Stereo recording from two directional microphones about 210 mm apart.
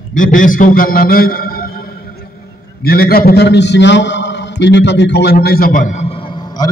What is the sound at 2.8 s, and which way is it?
A man's voice, 45° left (ahead or behind).